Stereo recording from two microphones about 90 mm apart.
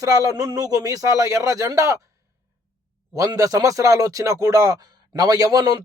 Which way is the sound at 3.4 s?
40° right (ahead or behind).